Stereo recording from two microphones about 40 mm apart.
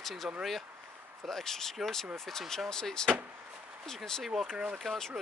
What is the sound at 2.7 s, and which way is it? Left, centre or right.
Speech, centre.